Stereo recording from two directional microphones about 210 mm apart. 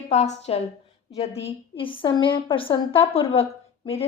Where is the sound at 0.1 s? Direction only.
30° left (ahead or behind).